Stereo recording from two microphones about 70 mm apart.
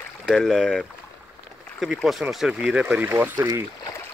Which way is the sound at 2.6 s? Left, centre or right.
Centre.